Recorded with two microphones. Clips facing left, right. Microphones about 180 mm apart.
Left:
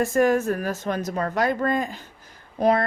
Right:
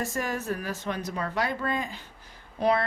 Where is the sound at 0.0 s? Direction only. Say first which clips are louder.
Left 11 dB; 55° left (ahead or behind).